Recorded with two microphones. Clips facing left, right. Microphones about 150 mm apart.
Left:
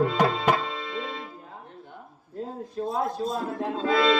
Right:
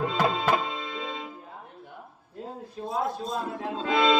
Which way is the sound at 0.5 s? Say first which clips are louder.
Right 1 dB; 20° right (ahead or behind).